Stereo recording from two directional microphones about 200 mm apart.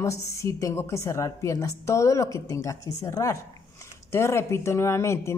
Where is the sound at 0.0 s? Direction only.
15° left (ahead or behind).